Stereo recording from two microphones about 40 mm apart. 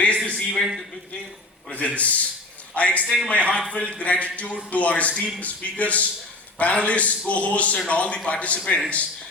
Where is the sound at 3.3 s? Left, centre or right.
Left.